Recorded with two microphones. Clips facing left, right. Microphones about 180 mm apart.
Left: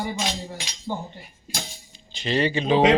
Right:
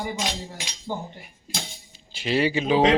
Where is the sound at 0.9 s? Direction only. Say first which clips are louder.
Left 1 dB; 10° right (ahead or behind).